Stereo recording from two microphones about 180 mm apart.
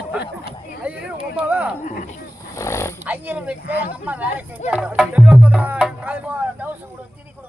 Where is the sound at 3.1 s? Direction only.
10° right (ahead or behind).